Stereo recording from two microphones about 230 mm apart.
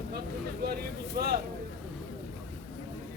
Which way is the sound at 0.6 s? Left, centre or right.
Right.